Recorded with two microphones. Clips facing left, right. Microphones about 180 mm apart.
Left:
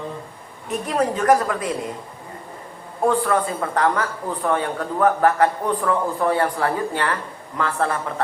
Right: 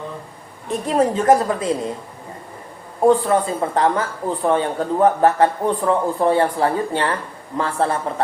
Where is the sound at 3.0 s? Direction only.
25° right (ahead or behind).